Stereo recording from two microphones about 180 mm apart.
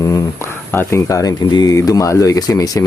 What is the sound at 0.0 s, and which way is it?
Speech, 15° left (ahead or behind).